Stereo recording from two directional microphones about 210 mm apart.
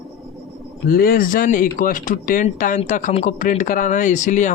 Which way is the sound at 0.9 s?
45° left (ahead or behind).